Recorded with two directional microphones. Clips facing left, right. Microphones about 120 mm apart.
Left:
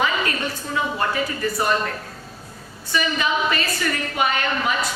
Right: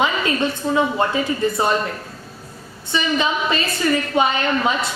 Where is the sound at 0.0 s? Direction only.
20° right (ahead or behind).